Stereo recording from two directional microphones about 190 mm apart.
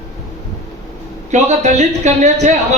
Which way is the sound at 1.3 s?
35° right (ahead or behind).